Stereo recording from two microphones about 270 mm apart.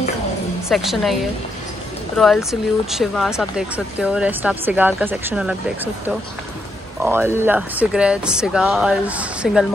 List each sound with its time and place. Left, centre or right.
0.7 s speech: centre
7.0 s speech: centre